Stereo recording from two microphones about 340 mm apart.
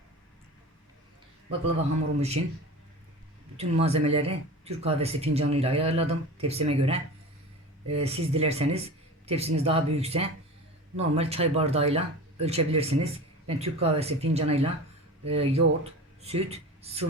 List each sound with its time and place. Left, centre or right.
3.6 s speech: centre